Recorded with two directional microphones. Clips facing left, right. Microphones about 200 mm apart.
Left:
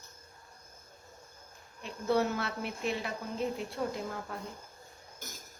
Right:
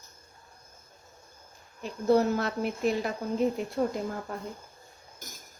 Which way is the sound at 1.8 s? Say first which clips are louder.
Right 6 dB; 35° right (ahead or behind).